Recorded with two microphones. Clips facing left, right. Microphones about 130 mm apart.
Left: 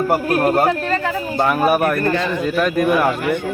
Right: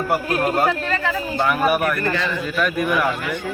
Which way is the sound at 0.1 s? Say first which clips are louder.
Left 2 dB; 45° left (ahead or behind).